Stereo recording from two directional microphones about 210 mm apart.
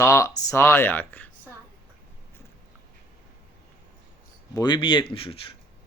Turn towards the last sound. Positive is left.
turn(degrees=25)  # may be behind; listen again after turning